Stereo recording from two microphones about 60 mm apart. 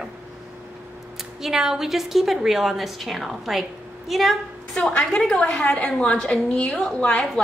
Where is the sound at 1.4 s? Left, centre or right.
Centre.